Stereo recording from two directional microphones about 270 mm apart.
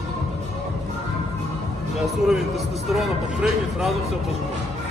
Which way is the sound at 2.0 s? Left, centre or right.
Centre.